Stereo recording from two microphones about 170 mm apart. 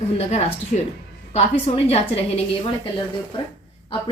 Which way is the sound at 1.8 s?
35° left (ahead or behind).